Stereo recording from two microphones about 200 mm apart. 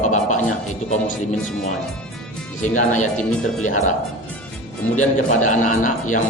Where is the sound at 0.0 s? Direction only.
35° left (ahead or behind).